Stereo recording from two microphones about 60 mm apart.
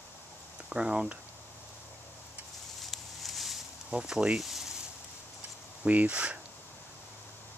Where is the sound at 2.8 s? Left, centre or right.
Centre.